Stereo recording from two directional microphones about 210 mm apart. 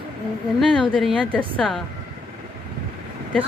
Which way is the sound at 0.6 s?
Centre (ahead or behind).